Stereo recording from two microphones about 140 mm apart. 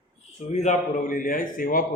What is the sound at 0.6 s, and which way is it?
A man's voice, 60° left (ahead or behind).